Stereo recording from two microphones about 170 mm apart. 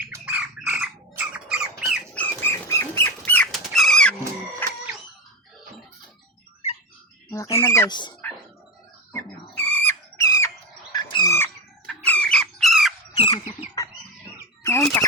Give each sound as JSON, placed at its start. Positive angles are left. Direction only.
{"t": 0.0, "sound": "squawk", "side_deg": -10}
{"t": 1.3, "sound": "rodents", "side_deg": -5}
{"t": 2.1, "sound": "dog", "side_deg": 10}
{"t": 4.6, "sound": "chicken", "side_deg": 10}
{"t": 7.3, "sound": "speech", "side_deg": 15}
{"t": 9.6, "sound": "a sound", "side_deg": 10}
{"t": 11.9, "sound": "squawk", "side_deg": 5}
{"t": 13.1, "sound": "chicken", "side_deg": 30}
{"t": 14.6, "sound": "bird", "side_deg": 15}